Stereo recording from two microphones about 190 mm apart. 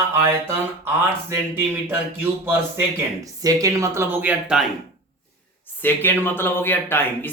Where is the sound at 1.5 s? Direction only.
10° right (ahead or behind).